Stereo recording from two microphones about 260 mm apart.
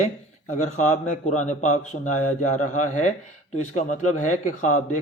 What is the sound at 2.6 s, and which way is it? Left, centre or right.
A man's voice, left.